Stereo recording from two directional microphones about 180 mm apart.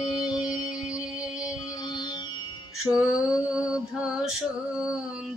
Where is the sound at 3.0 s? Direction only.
5° right (ahead or behind).